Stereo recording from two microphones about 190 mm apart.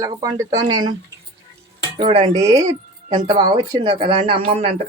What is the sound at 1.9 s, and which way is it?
Speech, 25° right (ahead or behind).